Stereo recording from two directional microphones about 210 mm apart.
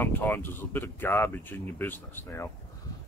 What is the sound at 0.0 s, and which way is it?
Speech, 10° left (ahead or behind).